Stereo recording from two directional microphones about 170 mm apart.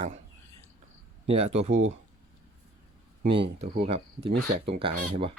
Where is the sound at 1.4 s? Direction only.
40° right (ahead or behind).